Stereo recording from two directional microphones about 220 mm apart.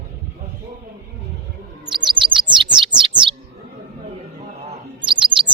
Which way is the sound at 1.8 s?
20° right (ahead or behind).